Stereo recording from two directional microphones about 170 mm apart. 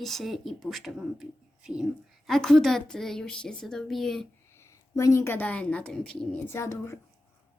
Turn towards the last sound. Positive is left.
turn(degrees=15)  # may be behind; listen again after turning